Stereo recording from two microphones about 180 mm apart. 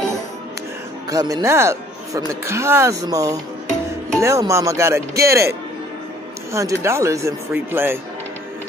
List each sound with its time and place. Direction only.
1.1 s speech: 20° right (ahead or behind)
6.5 s speech: 15° right (ahead or behind)